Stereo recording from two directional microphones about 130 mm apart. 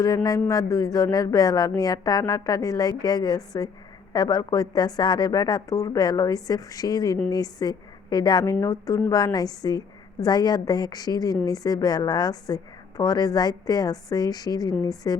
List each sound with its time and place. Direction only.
0.0 s a woman's voice: 25° left (ahead or behind)